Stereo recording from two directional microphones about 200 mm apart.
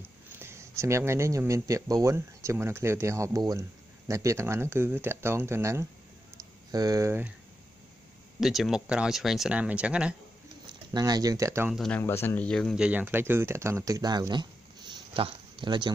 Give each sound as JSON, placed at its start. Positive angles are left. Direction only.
{"t": 0.0, "sound": "speech", "side_deg": -10}
{"t": 8.4, "sound": "speech", "side_deg": 0}
{"t": 10.7, "sound": "speech", "side_deg": -20}
{"t": 11.7, "sound": "speech", "side_deg": 0}
{"t": 12.0, "sound": "speech", "side_deg": 10}